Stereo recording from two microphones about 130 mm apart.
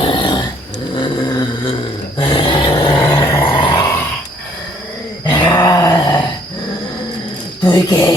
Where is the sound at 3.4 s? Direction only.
40° left (ahead or behind).